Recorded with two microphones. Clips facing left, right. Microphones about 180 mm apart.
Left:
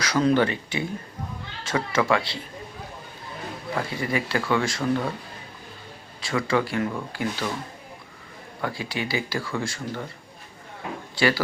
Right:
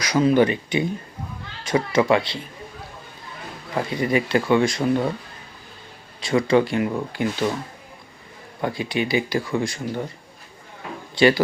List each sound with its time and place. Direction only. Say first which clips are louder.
0.0 s speech: right 3 dB; 10° right (ahead or behind)
3.8 s speech: right 6 dB; 20° right (ahead or behind)
6.1 s speech: right 6 dB; 20° right (ahead or behind)
8.6 s speech: right 5 dB; 20° right (ahead or behind)
11.1 s speech: right 6 dB; 20° right (ahead or behind)